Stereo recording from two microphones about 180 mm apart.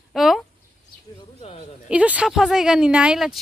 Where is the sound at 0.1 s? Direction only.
Centre (ahead or behind).